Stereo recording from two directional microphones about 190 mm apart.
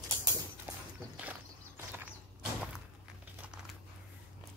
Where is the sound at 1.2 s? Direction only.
10° right (ahead or behind).